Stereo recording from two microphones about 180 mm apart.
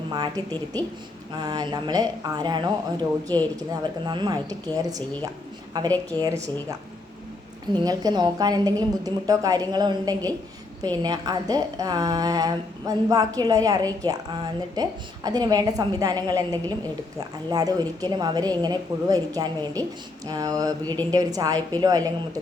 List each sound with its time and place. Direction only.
0.1 s a woman's voice: 20° right (ahead or behind)
0.5 s a woman's voice: 10° left (ahead or behind)
1.4 s a woman's voice: 20° right (ahead or behind)